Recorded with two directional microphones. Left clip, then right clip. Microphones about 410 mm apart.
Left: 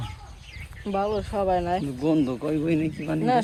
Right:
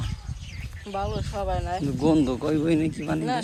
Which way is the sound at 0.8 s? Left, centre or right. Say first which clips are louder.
Left 5 dB; centre.